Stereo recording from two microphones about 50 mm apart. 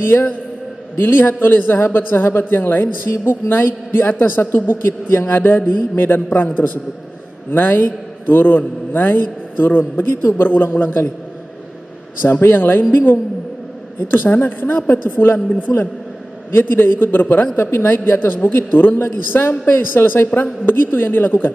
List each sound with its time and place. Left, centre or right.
0.1 s a man's voice: left
12.2 s a man's voice: left
16.5 s a man's voice: left
17.6 s a man's voice: left
20.2 s a man's voice: left
20.6 s a man's voice: left